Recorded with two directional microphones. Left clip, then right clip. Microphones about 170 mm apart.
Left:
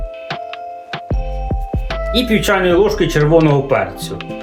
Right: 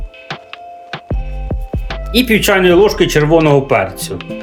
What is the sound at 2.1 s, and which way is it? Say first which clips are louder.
Speech: right 4 dB; 90° right.